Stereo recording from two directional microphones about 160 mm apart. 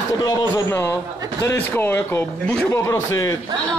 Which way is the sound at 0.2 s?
20° left (ahead or behind).